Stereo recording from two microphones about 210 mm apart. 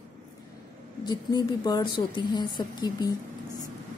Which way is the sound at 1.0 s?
20° left (ahead or behind).